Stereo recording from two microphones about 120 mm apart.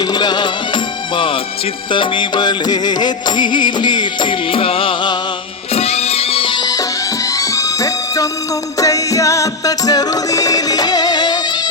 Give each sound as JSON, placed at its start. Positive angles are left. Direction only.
{"t": 0.0, "sound": "music", "side_deg": 35}
{"t": 5.7, "sound": "music", "side_deg": 60}